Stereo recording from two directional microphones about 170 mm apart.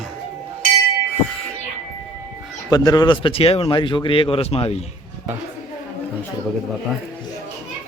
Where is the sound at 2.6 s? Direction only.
25° left (ahead or behind).